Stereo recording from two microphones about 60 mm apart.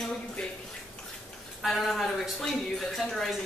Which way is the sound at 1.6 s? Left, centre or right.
Centre.